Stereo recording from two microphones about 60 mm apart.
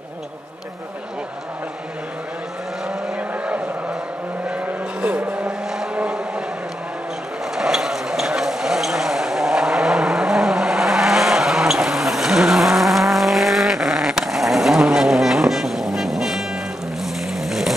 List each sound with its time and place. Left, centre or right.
3.2 s vehicle: right
7.5 s vehicle: centre
17.0 s a sound: centre